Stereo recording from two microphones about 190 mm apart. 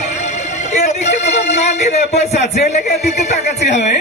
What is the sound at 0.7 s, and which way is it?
Speech, 40° left (ahead or behind).